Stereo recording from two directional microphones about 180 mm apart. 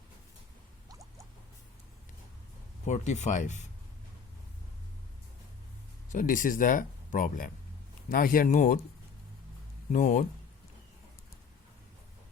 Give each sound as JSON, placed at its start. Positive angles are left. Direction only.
{"t": 2.8, "sound": "speech", "side_deg": 40}
{"t": 6.1, "sound": "speech", "side_deg": 50}
{"t": 9.9, "sound": "speech", "side_deg": 45}